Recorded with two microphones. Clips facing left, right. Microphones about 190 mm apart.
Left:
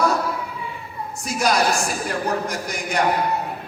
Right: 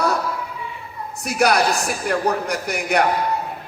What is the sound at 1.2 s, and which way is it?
A man's voice, 65° right (ahead or behind).